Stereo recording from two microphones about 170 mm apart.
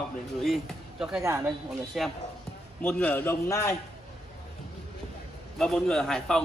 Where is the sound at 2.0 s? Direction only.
Centre (ahead or behind).